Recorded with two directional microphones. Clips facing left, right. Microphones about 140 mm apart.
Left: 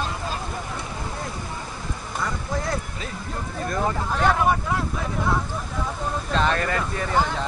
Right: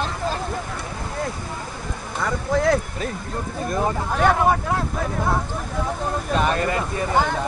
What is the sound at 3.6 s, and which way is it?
Speech, 20° right (ahead or behind).